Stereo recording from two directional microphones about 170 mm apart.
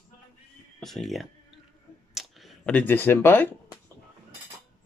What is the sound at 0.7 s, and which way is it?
Speech, centre (ahead or behind).